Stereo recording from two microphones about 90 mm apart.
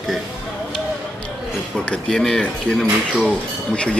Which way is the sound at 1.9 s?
5° left (ahead or behind).